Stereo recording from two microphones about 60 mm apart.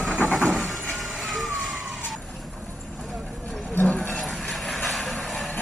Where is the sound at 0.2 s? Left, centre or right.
Left.